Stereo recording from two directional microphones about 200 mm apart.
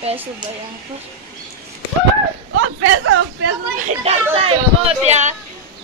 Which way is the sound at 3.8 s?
35° right (ahead or behind).